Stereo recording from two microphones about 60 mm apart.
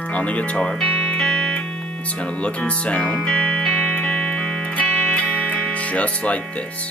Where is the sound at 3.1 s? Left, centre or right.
Centre.